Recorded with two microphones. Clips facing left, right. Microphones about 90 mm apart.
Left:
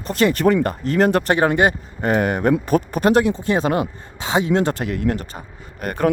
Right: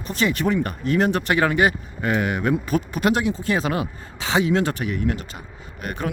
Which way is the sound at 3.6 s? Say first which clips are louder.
Left 5 dB; 40° left (ahead or behind).